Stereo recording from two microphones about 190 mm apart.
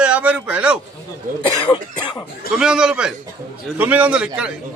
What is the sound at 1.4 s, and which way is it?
Speech, 25° left (ahead or behind).